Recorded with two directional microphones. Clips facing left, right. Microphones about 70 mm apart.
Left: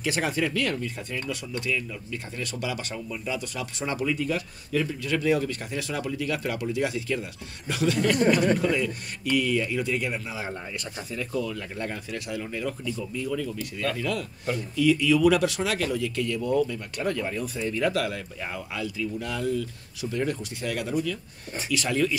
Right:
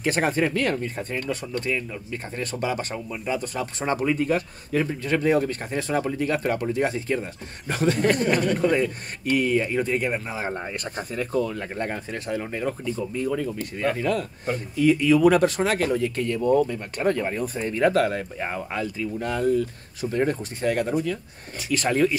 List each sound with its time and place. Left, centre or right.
0.0 s speech: right